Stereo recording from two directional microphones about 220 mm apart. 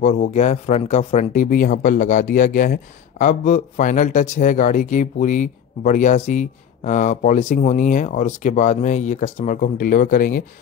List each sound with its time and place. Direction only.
0.0 s speech: 30° left (ahead or behind)